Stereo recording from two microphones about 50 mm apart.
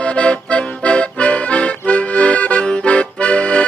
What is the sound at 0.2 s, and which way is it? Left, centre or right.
Accordion, left.